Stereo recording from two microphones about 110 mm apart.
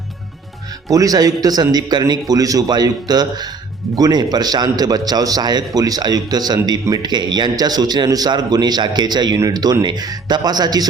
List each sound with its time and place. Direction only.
0.9 s a man's voice: 35° right (ahead or behind)